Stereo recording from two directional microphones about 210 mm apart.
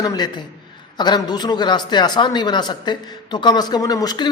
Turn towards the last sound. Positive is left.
turn(degrees=20)  # may be behind; listen again after turning